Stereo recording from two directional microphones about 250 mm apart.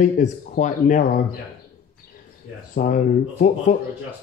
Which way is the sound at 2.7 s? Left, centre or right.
Left.